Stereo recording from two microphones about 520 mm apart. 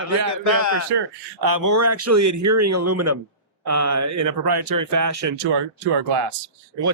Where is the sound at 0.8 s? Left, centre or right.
Right.